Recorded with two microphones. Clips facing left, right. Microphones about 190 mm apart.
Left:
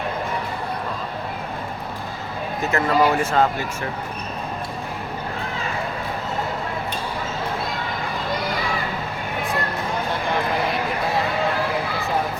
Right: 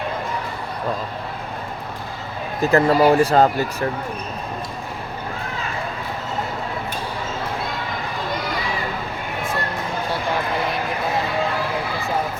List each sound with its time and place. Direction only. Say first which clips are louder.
2.6 s speech: right 5 dB; 35° right (ahead or behind)